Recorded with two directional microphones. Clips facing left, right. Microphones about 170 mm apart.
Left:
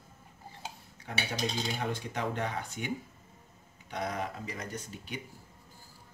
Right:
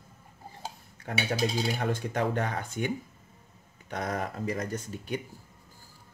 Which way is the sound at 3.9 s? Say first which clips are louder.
Right 3 dB; 50° right (ahead or behind).